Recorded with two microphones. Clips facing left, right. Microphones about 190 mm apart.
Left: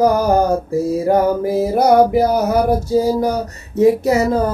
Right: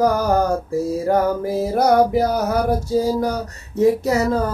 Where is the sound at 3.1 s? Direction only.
20° left (ahead or behind).